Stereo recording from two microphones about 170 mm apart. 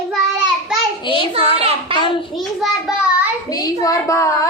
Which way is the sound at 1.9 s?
30° left (ahead or behind).